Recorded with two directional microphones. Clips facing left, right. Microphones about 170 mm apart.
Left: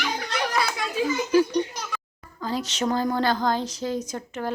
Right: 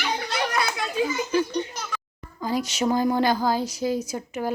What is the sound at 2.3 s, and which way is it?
Speech, 10° right (ahead or behind).